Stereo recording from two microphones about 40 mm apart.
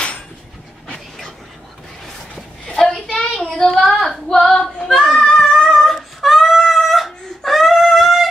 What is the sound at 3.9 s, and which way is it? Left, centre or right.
Female singing, centre.